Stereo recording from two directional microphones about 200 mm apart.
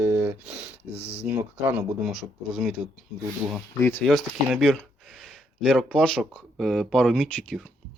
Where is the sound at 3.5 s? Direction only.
10° left (ahead or behind).